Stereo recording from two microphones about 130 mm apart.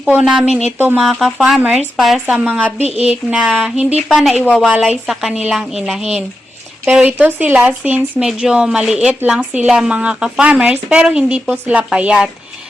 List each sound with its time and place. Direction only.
0.0 s a woman's voice: 10° right (ahead or behind)
1.0 s a woman's voice: 5° right (ahead or behind)